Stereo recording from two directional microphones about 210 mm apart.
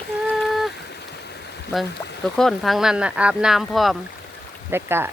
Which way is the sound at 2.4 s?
Centre (ahead or behind).